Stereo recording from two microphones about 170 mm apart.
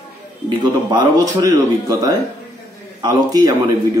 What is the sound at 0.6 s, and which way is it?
A man's voice, 25° right (ahead or behind).